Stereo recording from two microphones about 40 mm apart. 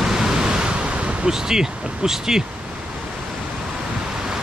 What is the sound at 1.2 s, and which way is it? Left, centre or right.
Speech, centre.